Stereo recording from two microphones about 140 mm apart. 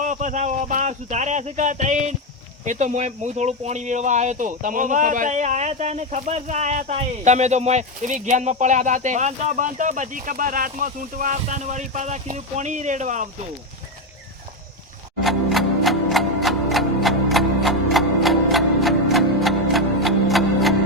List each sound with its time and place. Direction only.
0.0 s speech: 65° right (ahead or behind)
15.2 s music: centre (ahead or behind)